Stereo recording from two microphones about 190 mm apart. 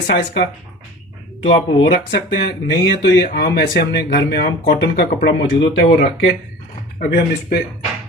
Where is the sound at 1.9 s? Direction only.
60° left (ahead or behind).